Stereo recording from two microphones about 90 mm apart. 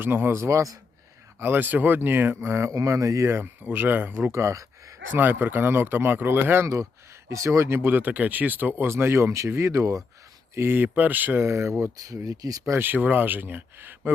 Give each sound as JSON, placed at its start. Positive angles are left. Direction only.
{"t": 0.0, "sound": "speech", "side_deg": -25}
{"t": 1.4, "sound": "speech", "side_deg": -25}
{"t": 5.1, "sound": "speech", "side_deg": -20}
{"t": 12.8, "sound": "speech", "side_deg": -20}